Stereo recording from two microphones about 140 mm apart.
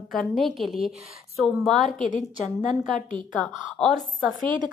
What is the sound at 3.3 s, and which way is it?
A woman's voice, 5° left (ahead or behind).